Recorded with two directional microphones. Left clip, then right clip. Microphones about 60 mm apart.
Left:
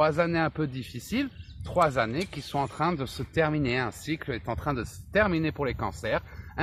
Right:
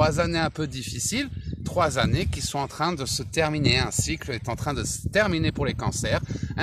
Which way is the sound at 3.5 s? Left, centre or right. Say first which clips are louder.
Right 4 dB; right.